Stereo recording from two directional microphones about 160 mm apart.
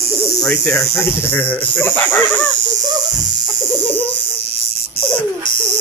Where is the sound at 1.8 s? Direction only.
10° left (ahead or behind).